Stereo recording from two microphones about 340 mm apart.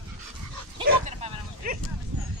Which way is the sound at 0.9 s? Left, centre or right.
Right.